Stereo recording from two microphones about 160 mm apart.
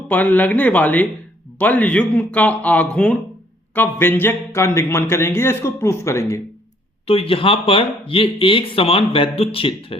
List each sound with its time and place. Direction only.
0.1 s speech: 10° left (ahead or behind)
7.1 s speech: 35° left (ahead or behind)